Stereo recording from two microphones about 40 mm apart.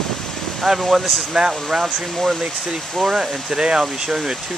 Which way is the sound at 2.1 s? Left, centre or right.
Centre.